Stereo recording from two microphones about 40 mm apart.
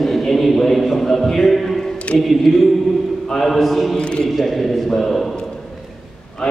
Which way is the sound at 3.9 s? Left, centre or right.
Left.